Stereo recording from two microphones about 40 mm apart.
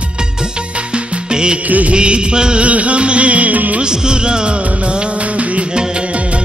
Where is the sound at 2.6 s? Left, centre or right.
Right.